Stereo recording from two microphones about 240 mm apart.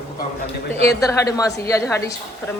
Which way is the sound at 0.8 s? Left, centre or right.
Centre.